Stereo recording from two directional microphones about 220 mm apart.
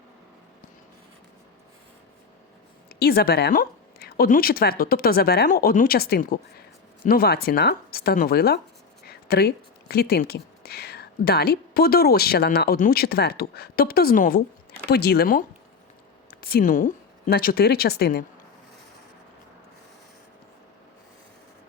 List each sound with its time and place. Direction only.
2.9 s speech: 45° left (ahead or behind)